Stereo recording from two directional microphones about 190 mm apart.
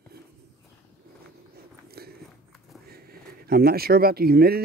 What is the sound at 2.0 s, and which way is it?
Walk, 55° right (ahead or behind).